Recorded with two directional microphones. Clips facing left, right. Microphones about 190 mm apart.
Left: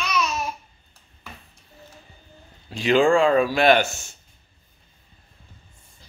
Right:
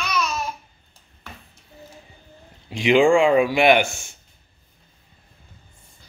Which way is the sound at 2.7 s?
15° right (ahead or behind).